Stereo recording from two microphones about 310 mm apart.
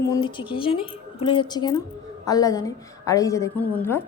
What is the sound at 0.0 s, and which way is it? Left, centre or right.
A woman's voice, centre.